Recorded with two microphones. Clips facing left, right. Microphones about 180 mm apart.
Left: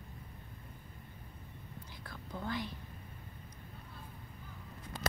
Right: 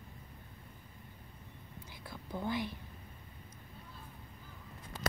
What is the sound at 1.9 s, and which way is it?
Whispering, 15° right (ahead or behind).